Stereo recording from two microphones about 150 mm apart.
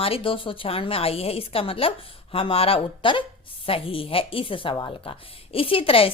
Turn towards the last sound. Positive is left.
turn(degrees=40)  # may be behind; listen again after turning